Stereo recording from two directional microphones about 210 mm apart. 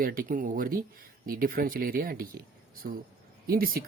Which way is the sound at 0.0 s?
40° right (ahead or behind).